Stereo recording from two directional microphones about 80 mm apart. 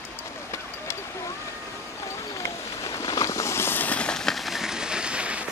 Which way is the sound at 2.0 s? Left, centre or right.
Left.